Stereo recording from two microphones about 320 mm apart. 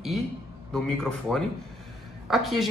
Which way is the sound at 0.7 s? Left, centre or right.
Centre.